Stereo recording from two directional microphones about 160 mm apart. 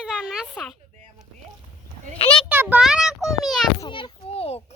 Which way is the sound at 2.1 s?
35° left (ahead or behind).